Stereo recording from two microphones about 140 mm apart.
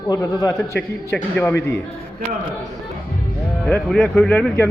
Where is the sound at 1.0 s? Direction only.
10° left (ahead or behind).